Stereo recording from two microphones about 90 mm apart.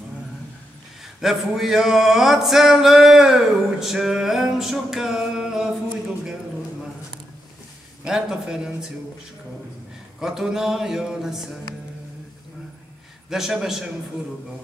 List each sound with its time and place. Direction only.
1.2 s male singing: 5° right (ahead or behind)
8.0 s speech: 10° right (ahead or behind)
10.2 s male singing: 5° right (ahead or behind)
13.3 s male singing: 5° right (ahead or behind)